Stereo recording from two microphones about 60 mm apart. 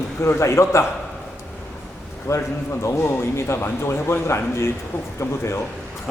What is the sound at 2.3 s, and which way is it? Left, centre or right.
Speech, left.